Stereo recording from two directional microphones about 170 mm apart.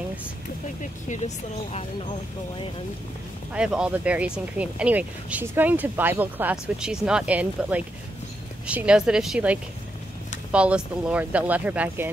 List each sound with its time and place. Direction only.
1.0 s speech: 45° left (ahead or behind)
3.5 s speech: 5° right (ahead or behind)